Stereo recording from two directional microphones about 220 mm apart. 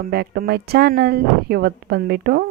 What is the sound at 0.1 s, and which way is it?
A woman's voice, 45° right (ahead or behind).